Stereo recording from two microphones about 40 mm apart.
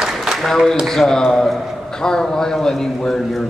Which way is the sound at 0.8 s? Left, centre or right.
Centre.